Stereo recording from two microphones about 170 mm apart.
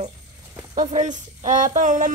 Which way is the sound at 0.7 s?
40° right (ahead or behind).